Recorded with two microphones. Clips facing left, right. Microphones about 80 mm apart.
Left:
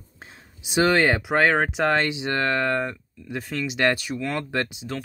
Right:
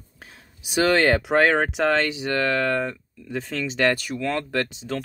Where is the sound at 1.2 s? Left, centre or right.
Centre.